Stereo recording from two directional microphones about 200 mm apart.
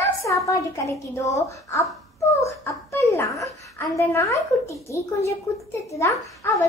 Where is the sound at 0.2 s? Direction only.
15° left (ahead or behind).